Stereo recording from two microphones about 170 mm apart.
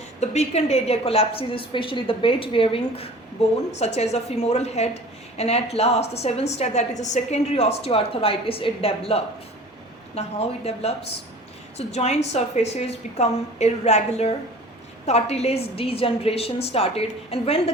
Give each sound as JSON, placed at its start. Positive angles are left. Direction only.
{"t": 0.2, "sound": "a woman's voice", "side_deg": 40}